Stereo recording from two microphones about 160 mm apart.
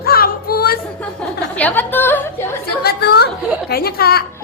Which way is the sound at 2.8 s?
75° left (ahead or behind).